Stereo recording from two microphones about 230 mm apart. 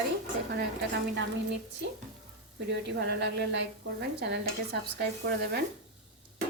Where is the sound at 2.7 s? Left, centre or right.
Right.